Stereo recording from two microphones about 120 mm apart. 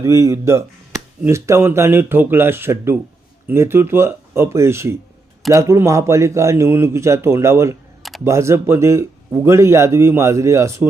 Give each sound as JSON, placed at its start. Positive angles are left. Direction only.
{"t": 0.0, "sound": "speech", "side_deg": -25}